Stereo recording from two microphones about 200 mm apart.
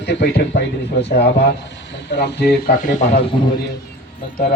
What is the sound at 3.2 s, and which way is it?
Speech, 25° left (ahead or behind).